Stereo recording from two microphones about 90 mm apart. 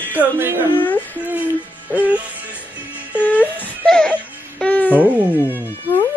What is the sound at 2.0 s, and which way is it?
Music, 15° right (ahead or behind).